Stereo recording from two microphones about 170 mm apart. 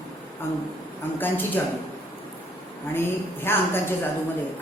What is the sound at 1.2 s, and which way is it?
Speech, 10° left (ahead or behind).